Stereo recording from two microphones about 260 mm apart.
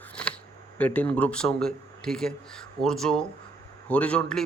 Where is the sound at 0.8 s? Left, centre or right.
Centre.